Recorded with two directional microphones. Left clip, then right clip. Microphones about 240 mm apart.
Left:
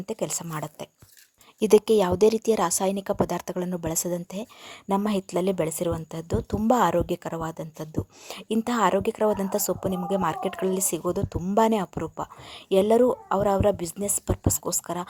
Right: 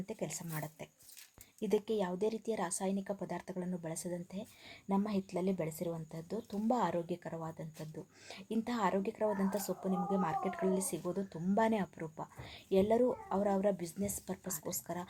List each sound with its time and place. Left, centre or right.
0.0 s a woman's voice: left